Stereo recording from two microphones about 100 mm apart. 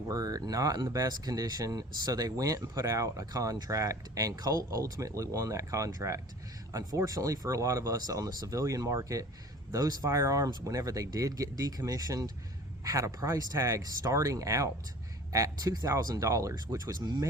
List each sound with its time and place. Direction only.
0.1 s speech: 35° right (ahead or behind)